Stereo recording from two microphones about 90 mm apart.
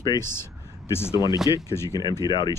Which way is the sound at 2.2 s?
55° left (ahead or behind).